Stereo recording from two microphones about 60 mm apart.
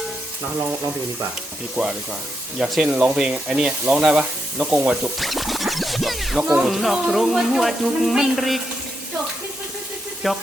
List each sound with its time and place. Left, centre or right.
1.7 s speech: centre
2.6 s speech: centre
2.9 s speech: centre
5.2 s music: centre
6.7 s speech: centre
10.2 s speech: centre